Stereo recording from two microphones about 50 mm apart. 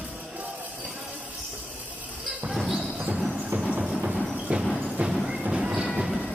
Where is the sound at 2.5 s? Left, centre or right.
Centre.